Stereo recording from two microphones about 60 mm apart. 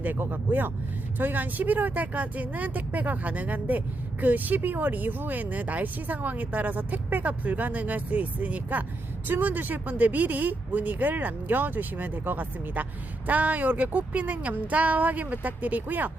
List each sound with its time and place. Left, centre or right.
0.0 s speech: right